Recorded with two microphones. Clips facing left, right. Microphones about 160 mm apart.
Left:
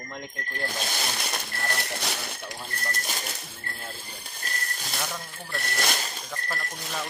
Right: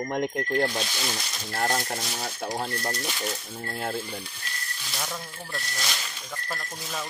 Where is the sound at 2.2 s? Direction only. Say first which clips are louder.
Right 7 dB; 80° right.